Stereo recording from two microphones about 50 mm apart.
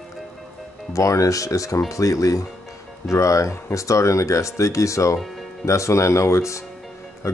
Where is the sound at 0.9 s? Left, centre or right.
Left.